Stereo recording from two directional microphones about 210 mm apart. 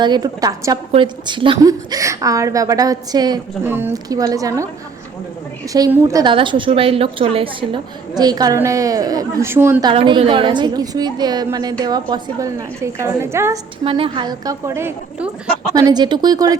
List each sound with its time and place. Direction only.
0.0 s a woman's voice: 20° right (ahead or behind)
5.7 s a woman's voice: 15° right (ahead or behind)
9.8 s a woman's voice: 25° right (ahead or behind)
13.8 s a woman's voice: 25° right (ahead or behind)